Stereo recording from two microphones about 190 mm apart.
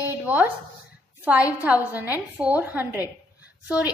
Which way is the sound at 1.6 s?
10° right (ahead or behind).